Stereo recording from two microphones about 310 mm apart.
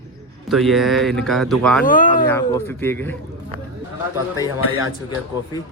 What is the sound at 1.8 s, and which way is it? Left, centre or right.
Speech, left.